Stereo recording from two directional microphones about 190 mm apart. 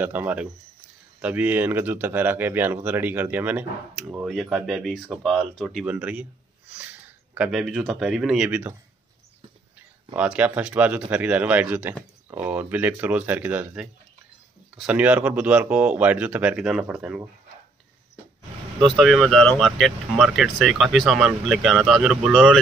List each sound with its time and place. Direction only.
0.0 s speech: 10° right (ahead or behind)
10.1 s speech: 5° right (ahead or behind)
18.8 s speech: centre (ahead or behind)